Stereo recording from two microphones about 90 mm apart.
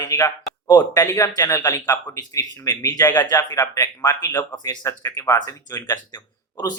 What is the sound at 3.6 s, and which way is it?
Speech, 35° left (ahead or behind).